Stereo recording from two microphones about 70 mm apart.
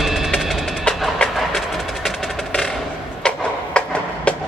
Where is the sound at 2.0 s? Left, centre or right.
Centre.